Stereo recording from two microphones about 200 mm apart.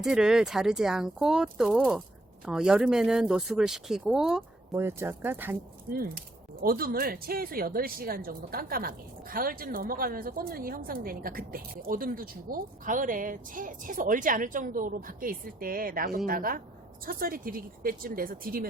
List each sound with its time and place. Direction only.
0.0 s speech: 5° right (ahead or behind)
6.6 s speech: 45° right (ahead or behind)